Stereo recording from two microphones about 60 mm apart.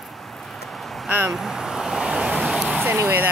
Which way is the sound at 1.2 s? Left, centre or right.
Centre.